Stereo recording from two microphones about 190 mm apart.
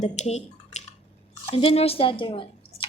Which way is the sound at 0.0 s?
35° left (ahead or behind).